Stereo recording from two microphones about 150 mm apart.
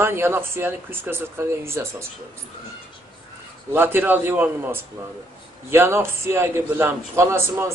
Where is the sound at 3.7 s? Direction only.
15° right (ahead or behind).